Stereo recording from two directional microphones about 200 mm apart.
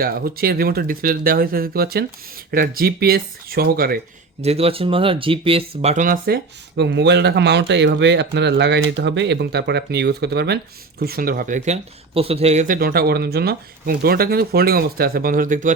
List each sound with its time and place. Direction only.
0.0 s speech: 50° right (ahead or behind)
4.4 s speech: 30° right (ahead or behind)